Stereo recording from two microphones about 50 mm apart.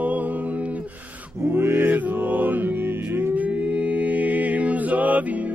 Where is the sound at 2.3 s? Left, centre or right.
Right.